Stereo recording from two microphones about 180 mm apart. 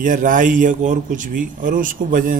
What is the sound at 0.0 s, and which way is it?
Speech, 50° right (ahead or behind).